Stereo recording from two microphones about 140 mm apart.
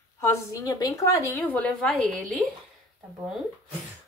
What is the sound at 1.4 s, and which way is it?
A woman's voice, 10° left (ahead or behind).